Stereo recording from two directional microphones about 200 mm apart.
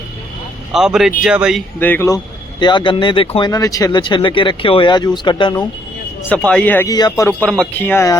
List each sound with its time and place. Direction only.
0.7 s speech: centre (ahead or behind)
1.8 s speech: 10° left (ahead or behind)
6.2 s a man's voice: 5° left (ahead or behind)